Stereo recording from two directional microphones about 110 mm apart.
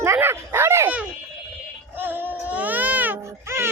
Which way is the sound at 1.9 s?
20° right (ahead or behind).